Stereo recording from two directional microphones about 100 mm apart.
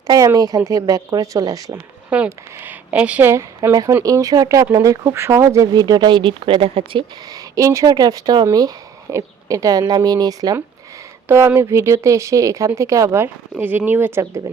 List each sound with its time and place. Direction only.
0.3 s speech: 35° right (ahead or behind)
2.0 s speech: 15° right (ahead or behind); by 5.6 s 30° right (ahead or behind)
5.7 s speech: 45° right (ahead or behind); by 7.0 s 65° right (ahead or behind)
7.3 s speech: 35° right (ahead or behind)
11.3 s speech: 25° right (ahead or behind)